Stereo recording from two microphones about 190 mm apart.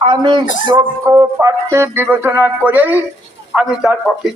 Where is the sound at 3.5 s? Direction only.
5° right (ahead or behind).